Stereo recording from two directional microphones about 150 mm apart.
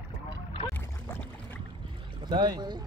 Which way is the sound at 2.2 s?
30° right (ahead or behind).